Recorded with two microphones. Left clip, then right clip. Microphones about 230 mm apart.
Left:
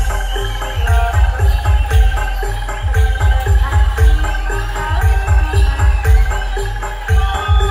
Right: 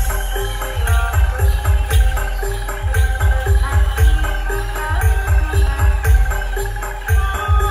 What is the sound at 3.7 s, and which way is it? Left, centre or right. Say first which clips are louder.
Music: left 2 dB; right.